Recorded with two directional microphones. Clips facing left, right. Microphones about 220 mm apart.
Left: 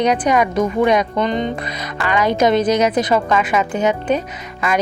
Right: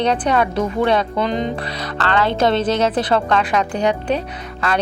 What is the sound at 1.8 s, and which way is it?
A woman's voice, 10° left (ahead or behind).